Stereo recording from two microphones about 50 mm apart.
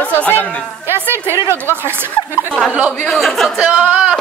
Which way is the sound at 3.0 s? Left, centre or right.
Centre.